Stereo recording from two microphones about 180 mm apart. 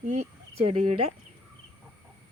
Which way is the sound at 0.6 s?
30° right (ahead or behind).